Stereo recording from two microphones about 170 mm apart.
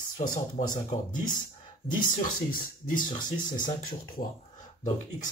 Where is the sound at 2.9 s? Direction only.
55° left (ahead or behind).